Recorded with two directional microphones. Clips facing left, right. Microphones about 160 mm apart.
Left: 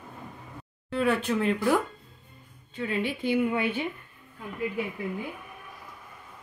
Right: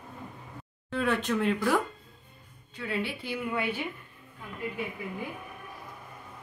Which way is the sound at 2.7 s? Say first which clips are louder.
Left 3 dB; 20° left (ahead or behind).